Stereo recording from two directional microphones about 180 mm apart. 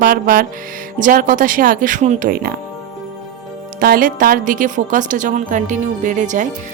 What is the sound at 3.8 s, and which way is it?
Speech, 50° right (ahead or behind).